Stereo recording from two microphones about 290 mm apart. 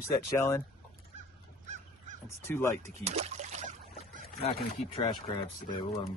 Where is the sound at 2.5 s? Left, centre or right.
Centre.